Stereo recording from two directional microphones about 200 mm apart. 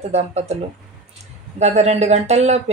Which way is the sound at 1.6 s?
35° right (ahead or behind).